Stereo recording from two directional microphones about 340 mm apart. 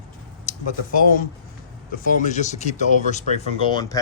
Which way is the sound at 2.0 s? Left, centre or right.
Left.